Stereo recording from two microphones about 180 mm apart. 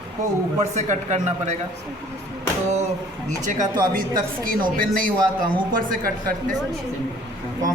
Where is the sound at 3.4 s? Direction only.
45° right (ahead or behind).